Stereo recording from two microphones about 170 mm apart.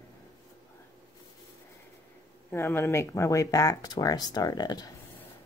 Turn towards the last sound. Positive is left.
turn(degrees=25)  # may be behind; listen again after turning